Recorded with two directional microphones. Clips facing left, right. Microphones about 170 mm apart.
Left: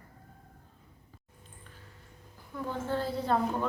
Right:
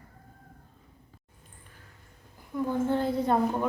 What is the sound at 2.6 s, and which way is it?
Speech, 15° right (ahead or behind).